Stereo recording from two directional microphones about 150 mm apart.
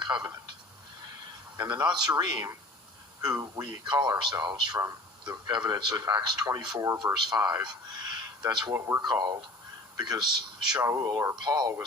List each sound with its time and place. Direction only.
0.0 s speech: 30° right (ahead or behind)
1.5 s a man's voice: 15° right (ahead or behind)
1.9 s a man's voice: 30° right (ahead or behind)
10.8 s a man's voice: 20° right (ahead or behind)